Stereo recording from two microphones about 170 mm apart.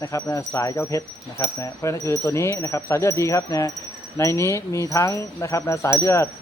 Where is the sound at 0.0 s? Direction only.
15° left (ahead or behind).